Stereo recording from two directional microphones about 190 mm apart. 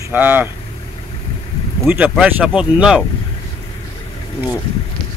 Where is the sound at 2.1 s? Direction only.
5° right (ahead or behind).